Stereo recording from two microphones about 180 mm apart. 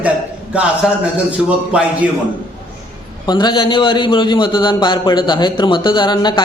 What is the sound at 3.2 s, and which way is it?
A man's voice, 25° left (ahead or behind).